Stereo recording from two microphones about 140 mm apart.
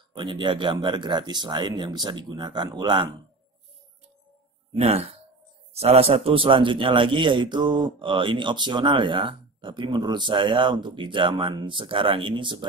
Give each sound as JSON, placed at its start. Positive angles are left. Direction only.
{"t": 0.1, "sound": "a man's voice", "side_deg": -35}
{"t": 4.7, "sound": "a man's voice", "side_deg": -50}